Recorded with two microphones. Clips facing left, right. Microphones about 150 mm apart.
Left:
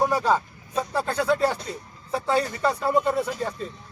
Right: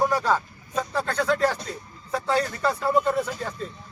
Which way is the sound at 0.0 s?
10° left (ahead or behind).